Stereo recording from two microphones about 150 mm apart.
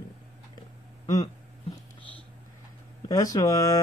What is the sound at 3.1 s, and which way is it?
Speech, 25° left (ahead or behind).